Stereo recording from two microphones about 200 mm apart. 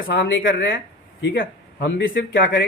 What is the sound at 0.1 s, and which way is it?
Speech, 70° left (ahead or behind).